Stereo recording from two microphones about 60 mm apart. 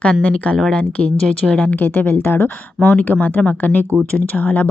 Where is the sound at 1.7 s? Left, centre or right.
Left.